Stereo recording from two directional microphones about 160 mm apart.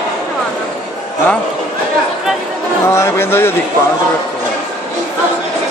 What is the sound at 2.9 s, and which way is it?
Speech, 15° left (ahead or behind).